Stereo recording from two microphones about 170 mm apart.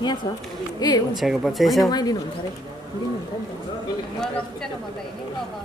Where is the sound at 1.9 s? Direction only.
25° left (ahead or behind).